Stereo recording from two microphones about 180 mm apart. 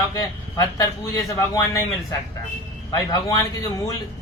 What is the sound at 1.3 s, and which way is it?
Speech, 15° left (ahead or behind).